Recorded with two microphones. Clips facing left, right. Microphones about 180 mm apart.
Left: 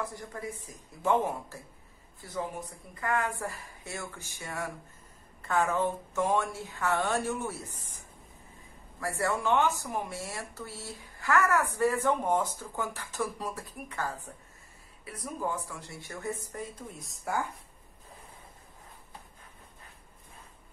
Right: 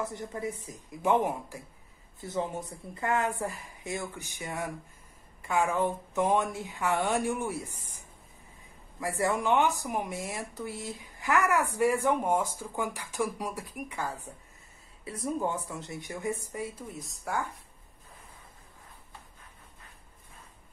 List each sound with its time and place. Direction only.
0.0 s a woman's voice: 20° right (ahead or behind)
9.0 s speech: 15° right (ahead or behind)
15.0 s speech: 25° right (ahead or behind); by 17.4 s centre (ahead or behind)